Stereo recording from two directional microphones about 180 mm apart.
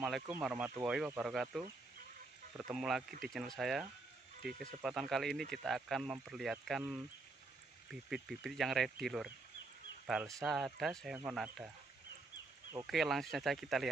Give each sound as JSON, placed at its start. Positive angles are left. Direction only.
{"t": 0.0, "sound": "speech", "side_deg": 0}
{"t": 4.4, "sound": "speech", "side_deg": -55}
{"t": 4.8, "sound": "speech", "side_deg": 0}
{"t": 12.8, "sound": "speech", "side_deg": 0}